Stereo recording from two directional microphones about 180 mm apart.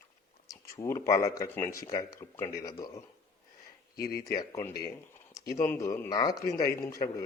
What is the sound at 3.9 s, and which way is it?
Speech, 60° left (ahead or behind).